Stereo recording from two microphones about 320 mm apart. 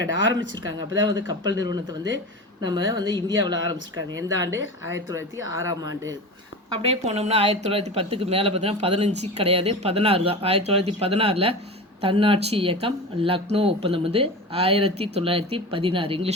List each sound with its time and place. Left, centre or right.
0.1 s speech: right
1.0 s speech: centre
2.9 s speech: centre
6.9 s speech: centre